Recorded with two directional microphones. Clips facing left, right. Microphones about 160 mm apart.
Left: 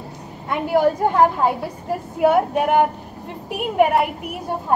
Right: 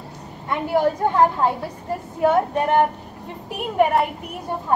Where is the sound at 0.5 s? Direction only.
5° left (ahead or behind).